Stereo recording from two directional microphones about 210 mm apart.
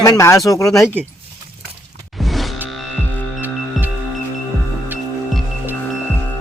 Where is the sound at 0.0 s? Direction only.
15° left (ahead or behind).